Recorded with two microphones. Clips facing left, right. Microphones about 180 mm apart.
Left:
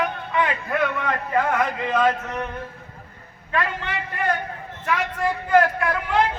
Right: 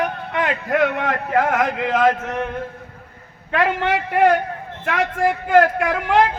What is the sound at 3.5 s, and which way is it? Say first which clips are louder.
Speech: right 7 dB; 75° right (ahead or behind).